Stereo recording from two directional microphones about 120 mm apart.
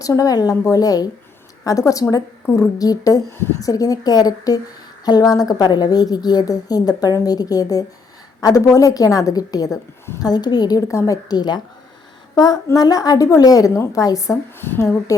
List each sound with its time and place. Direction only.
0.0 s a woman's voice: 30° left (ahead or behind)